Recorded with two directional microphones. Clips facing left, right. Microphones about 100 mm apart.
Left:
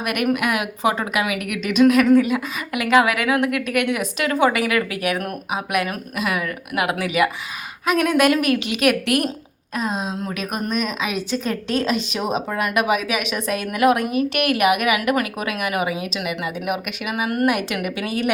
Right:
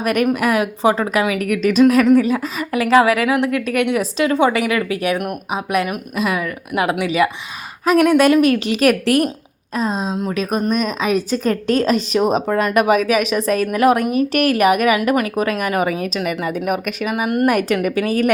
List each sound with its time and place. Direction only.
0.0 s a woman's voice: 35° right (ahead or behind)